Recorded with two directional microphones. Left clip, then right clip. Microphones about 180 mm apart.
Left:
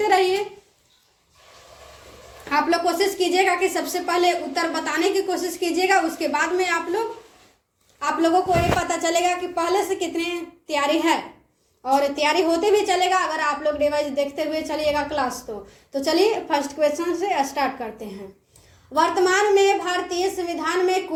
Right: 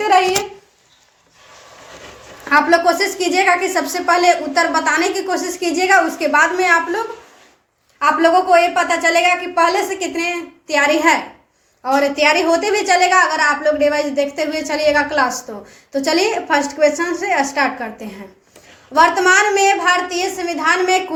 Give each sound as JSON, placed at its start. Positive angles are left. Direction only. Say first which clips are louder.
{"t": 2.5, "sound": "a woman's voice", "louder": "right 8 dB", "side_deg": 25}
{"t": 18.9, "sound": "a woman's voice", "louder": "right 7 dB", "side_deg": 20}